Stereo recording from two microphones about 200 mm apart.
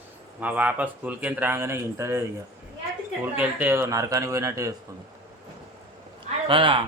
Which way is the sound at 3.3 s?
10° right (ahead or behind).